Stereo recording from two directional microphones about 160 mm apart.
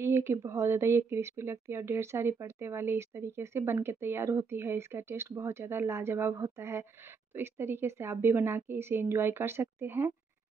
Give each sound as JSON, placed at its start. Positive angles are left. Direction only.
{"t": 0.0, "sound": "speech", "side_deg": -15}